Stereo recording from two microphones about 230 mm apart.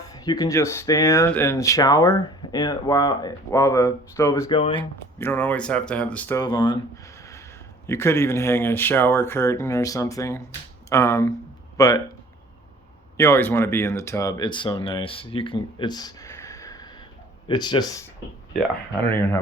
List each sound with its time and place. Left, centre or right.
0.1 s speech: centre
5.2 s speech: centre
13.1 s speech: centre
18.5 s speech: centre